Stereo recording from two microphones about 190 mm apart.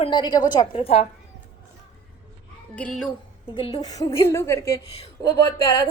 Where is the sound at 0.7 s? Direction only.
30° left (ahead or behind).